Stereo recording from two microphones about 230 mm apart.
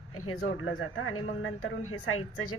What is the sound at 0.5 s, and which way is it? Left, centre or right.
Speech, left.